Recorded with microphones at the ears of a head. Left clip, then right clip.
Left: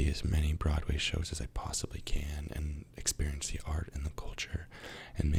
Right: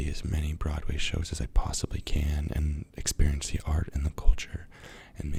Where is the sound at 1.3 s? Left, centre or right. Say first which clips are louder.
Right 4 dB; right.